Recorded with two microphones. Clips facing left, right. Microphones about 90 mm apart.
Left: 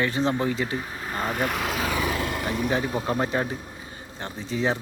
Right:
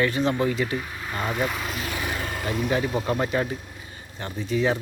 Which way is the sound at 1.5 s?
75° left (ahead or behind).